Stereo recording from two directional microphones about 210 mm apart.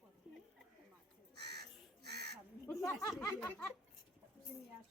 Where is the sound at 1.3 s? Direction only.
50° right (ahead or behind).